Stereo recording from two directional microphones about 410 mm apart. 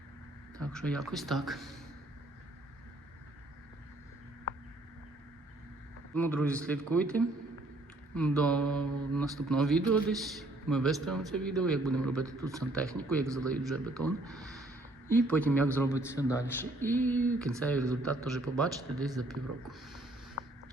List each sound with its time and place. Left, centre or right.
0.6 s speech: centre
6.1 s a man's voice: centre
20.4 s a sound: left